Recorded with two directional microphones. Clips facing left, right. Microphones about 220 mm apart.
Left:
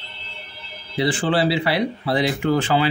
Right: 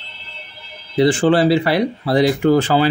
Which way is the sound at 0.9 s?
45° right (ahead or behind).